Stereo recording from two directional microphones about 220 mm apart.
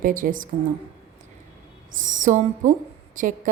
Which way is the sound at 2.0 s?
35° right (ahead or behind).